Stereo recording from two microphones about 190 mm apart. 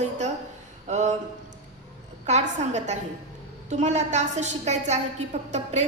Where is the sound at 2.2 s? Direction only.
35° right (ahead or behind).